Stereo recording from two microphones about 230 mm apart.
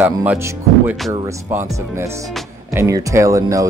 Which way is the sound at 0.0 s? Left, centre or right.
Centre.